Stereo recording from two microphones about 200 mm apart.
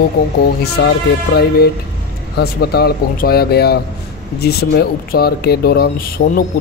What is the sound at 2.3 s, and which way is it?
Speech, 50° left (ahead or behind).